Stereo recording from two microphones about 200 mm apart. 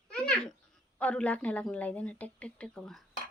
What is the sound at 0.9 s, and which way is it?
Speech, 5° left (ahead or behind).